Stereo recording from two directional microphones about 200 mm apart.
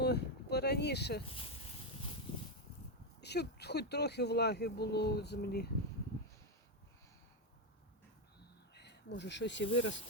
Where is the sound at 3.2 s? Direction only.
55° left (ahead or behind).